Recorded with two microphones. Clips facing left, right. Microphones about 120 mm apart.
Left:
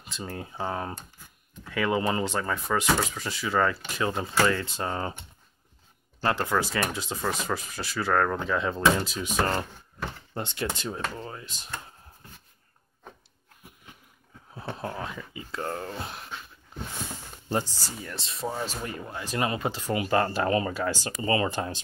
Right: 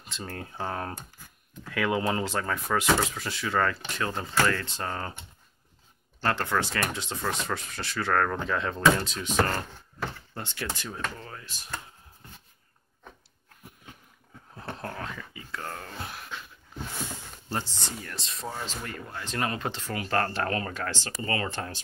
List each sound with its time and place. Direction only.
0.0 s speech: 5° left (ahead or behind)
6.2 s speech: 10° left (ahead or behind)
10.3 s speech: 20° left (ahead or behind)
14.5 s speech: 10° left (ahead or behind); by 16.3 s 25° left (ahead or behind)
17.5 s speech: 15° left (ahead or behind)
17.7 s speech: 5° left (ahead or behind)